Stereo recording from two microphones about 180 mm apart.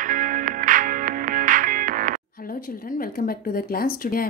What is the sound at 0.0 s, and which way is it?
Music, 45° right (ahead or behind).